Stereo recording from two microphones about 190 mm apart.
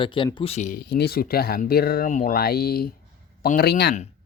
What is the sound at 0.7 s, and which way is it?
Speech, 55° left (ahead or behind).